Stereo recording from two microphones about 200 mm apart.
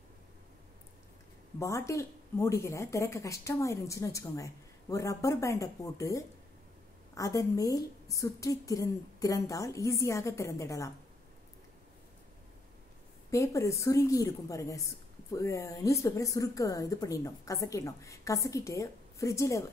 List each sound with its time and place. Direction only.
1.6 s a woman's voice: 15° left (ahead or behind)
13.3 s a woman's voice: 15° left (ahead or behind)